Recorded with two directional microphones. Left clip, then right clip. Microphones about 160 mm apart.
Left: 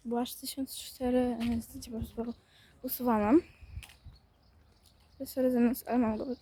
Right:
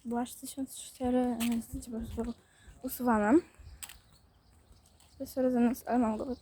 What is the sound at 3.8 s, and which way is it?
Pulleys, 60° right (ahead or behind).